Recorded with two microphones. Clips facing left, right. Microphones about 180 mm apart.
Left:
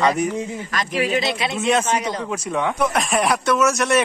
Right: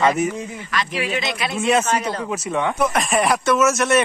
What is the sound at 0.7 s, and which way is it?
Speech, 45° left (ahead or behind).